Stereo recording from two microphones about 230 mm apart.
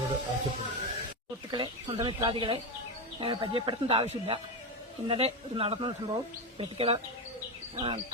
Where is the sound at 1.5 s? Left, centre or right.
Centre.